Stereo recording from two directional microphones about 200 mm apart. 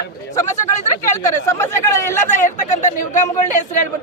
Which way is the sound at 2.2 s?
40° left (ahead or behind).